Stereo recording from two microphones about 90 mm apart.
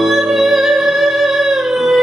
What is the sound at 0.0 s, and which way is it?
Music, centre (ahead or behind).